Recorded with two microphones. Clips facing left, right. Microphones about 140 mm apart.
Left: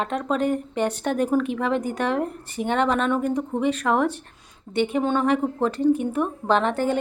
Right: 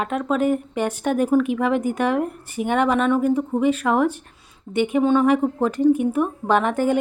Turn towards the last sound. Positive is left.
turn(degrees=-15)  # may be behind; listen again after turning